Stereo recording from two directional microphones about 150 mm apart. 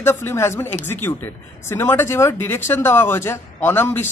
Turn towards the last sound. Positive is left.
turn(degrees=15)  # may be behind; listen again after turning